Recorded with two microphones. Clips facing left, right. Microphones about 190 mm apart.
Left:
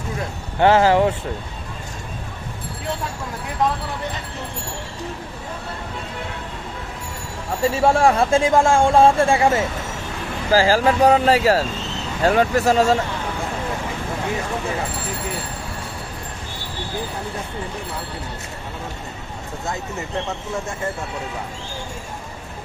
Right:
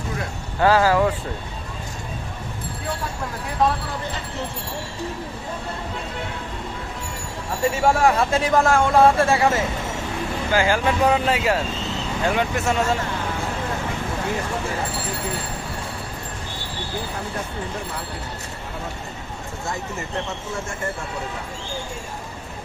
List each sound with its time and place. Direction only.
0.6 s speech: 25° left (ahead or behind)
7.7 s speech: 30° left (ahead or behind)
10.5 s speech: 35° left (ahead or behind)